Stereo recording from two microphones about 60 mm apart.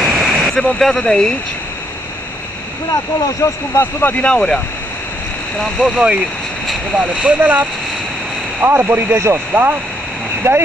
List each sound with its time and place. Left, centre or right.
0.0 s waterfall: centre
0.7 s speech: centre
2.9 s speech: left
3.8 s speech: left
4.3 s speech: centre
5.6 s speech: centre
7.0 s speech: right
10.4 s speech: right